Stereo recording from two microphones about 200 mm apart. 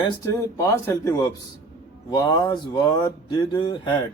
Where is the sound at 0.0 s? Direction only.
15° left (ahead or behind).